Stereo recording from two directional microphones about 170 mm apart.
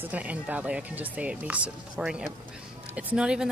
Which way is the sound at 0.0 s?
10° right (ahead or behind).